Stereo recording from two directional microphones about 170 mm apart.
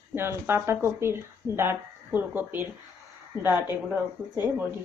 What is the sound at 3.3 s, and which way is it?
Speech, 25° left (ahead or behind).